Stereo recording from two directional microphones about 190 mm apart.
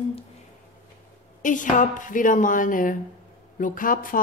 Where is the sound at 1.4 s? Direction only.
40° left (ahead or behind).